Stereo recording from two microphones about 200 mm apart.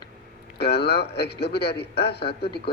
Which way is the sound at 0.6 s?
55° left (ahead or behind).